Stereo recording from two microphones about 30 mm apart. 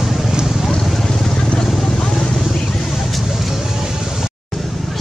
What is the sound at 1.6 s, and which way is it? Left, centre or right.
Vehicle, centre.